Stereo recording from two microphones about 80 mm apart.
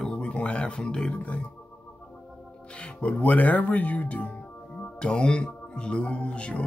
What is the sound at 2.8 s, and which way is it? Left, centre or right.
Speech, centre.